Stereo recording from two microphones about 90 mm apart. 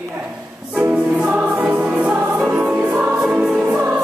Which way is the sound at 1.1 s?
15° right (ahead or behind).